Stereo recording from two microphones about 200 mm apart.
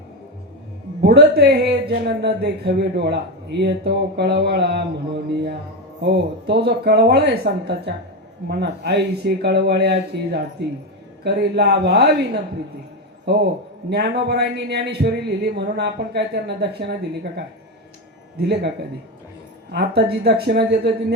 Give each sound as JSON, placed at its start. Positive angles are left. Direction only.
{"t": 1.0, "sound": "a man's voice", "side_deg": -55}
{"t": 18.3, "sound": "speech", "side_deg": -55}